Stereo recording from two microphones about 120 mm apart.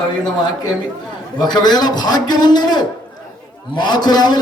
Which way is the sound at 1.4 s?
35° left (ahead or behind).